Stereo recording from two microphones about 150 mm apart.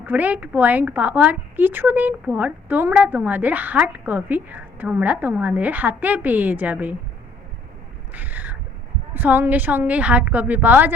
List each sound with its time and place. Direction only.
0.0 s a woman's voice: 10° right (ahead or behind)
8.1 s cat: 10° right (ahead or behind)
9.1 s a woman's voice: 15° right (ahead or behind)